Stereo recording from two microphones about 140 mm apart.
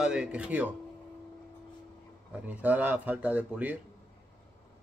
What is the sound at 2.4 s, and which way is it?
Speech, 10° right (ahead or behind).